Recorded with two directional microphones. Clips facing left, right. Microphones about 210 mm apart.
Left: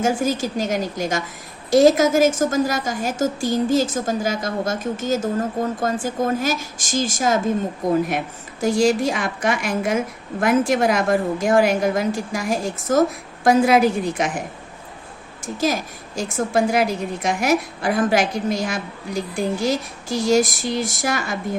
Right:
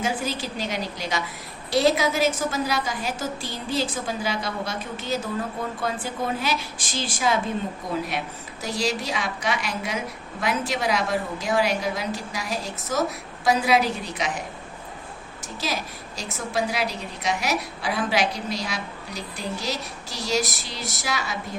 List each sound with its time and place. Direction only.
0.0 s a woman's voice: 45° left (ahead or behind)
8.6 s a woman's voice: 50° left (ahead or behind)
15.6 s a woman's voice: 50° left (ahead or behind)